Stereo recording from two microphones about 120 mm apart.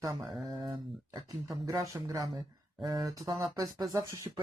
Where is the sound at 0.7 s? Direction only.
35° right (ahead or behind).